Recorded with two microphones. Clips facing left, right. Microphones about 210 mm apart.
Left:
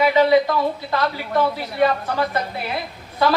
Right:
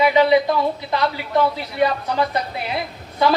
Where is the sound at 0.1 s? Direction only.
20° right (ahead or behind).